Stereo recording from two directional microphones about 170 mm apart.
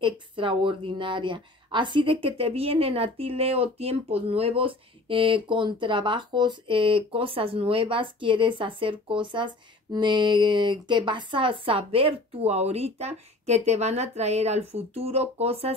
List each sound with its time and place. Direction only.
0.0 s a woman's voice: 30° right (ahead or behind)